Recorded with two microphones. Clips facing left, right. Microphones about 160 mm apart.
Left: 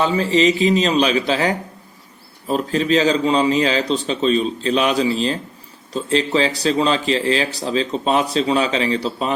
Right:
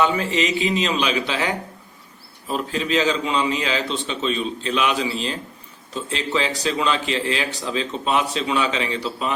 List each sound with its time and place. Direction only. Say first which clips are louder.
0.0 s a man's voice: left 4 dB; 30° left (ahead or behind)